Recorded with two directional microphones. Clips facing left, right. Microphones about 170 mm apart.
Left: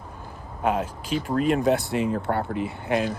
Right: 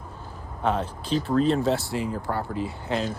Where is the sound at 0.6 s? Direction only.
10° left (ahead or behind).